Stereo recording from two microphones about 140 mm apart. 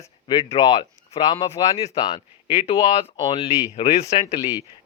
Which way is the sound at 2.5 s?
45° left (ahead or behind).